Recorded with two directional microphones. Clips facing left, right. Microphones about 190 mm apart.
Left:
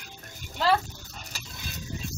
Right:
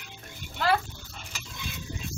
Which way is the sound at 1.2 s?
40° left (ahead or behind).